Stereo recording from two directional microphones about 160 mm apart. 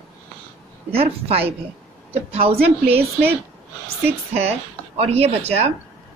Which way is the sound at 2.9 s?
40° right (ahead or behind).